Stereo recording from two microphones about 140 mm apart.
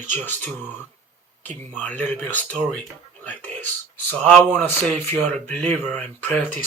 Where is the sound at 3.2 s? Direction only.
10° left (ahead or behind).